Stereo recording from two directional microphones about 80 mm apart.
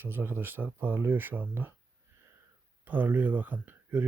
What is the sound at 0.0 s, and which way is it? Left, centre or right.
Speech, right.